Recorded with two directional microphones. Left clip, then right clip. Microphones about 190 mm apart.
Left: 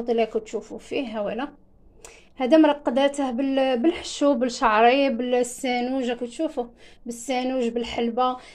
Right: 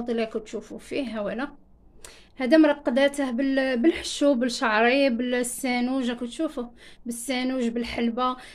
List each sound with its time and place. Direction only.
0.4 s speech: centre (ahead or behind)
3.8 s speech: 20° right (ahead or behind)